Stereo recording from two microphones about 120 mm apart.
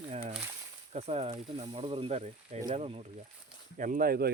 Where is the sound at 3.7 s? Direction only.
90° right.